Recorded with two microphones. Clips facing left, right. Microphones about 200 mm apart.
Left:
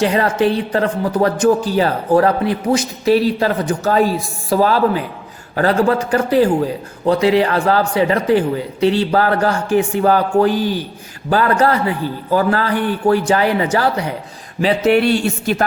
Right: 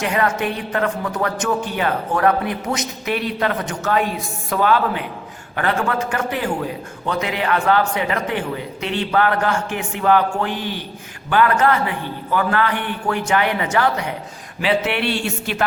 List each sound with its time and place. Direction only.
0.0 s speech: 35° left (ahead or behind)